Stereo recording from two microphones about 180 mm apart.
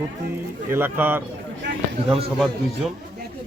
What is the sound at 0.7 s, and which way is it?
Speech, 10° right (ahead or behind).